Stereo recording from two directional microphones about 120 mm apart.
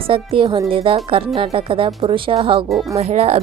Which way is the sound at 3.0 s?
60° right (ahead or behind).